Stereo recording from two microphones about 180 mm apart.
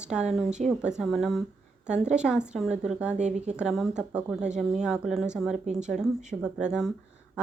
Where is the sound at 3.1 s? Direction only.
40° right (ahead or behind).